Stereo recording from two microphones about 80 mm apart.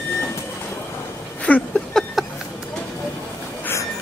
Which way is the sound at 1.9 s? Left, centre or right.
Centre.